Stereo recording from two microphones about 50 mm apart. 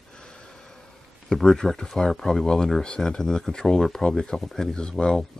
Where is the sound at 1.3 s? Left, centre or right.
Centre.